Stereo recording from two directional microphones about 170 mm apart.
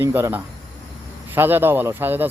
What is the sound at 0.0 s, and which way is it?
Speech, 15° right (ahead or behind).